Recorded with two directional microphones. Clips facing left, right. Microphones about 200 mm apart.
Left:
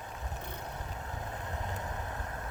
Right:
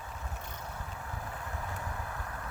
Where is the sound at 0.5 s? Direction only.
20° left (ahead or behind).